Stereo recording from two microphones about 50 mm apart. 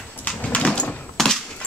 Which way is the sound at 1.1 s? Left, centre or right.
Centre.